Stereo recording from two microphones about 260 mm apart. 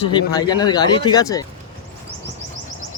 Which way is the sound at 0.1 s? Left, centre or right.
Centre.